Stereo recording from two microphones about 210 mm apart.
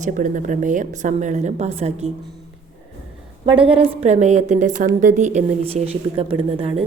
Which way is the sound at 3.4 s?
25° right (ahead or behind).